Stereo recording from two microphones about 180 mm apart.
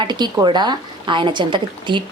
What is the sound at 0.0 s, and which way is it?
A woman's voice, 25° right (ahead or behind).